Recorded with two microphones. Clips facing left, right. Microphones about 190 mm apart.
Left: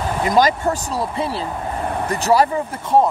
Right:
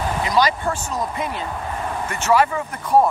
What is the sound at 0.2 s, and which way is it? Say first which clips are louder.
Speech: left 4 dB; 45° left (ahead or behind).